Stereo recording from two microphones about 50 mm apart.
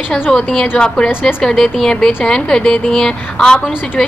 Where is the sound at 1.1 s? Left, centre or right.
Left.